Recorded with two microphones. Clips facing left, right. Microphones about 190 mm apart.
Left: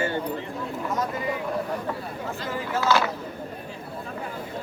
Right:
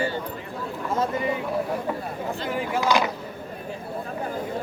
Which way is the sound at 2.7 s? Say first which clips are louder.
Even; 15° right (ahead or behind).